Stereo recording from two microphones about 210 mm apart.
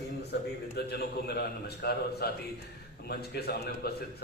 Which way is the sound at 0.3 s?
50° left (ahead or behind).